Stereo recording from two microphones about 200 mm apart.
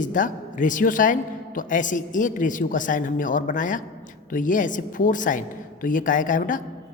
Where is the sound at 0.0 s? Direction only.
40° left (ahead or behind).